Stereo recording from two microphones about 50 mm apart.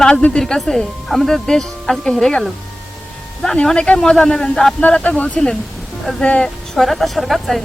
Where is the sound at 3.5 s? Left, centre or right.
Centre.